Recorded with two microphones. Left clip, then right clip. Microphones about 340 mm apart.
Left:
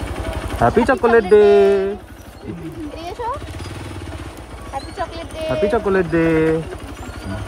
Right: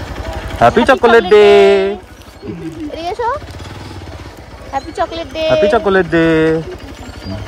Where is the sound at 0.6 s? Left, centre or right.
Centre.